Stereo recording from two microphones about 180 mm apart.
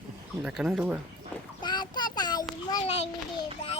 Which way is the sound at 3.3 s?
35° left (ahead or behind).